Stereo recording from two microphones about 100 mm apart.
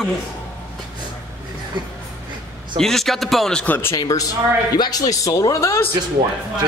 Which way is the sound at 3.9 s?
35° left (ahead or behind).